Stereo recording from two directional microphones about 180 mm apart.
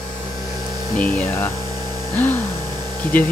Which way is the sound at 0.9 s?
10° left (ahead or behind).